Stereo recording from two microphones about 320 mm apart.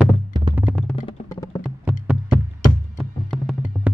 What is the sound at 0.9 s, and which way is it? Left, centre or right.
Music, centre.